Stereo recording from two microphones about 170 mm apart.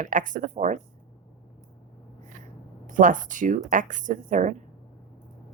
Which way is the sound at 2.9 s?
50° right (ahead or behind).